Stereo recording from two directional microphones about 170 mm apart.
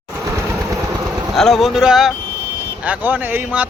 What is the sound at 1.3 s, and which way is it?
A man's voice, centre (ahead or behind).